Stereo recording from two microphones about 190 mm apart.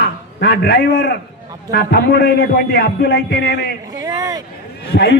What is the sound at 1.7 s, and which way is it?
A man's voice, 55° left (ahead or behind).